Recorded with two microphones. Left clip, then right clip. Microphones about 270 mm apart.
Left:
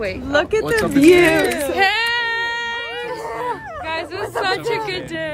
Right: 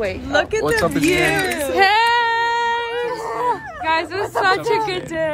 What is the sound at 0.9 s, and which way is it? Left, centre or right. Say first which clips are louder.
Speech: left 5 dB; left.